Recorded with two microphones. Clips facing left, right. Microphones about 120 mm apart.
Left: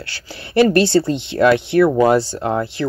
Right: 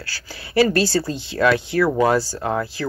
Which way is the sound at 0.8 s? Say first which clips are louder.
Left 6 dB; 25° left (ahead or behind).